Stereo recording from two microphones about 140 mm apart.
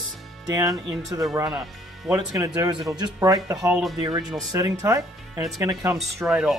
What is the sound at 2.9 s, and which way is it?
Speech, 30° right (ahead or behind).